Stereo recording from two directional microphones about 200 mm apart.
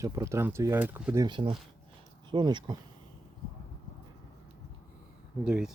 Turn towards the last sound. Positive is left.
turn(degrees=-5)  # may be behind; listen again after turning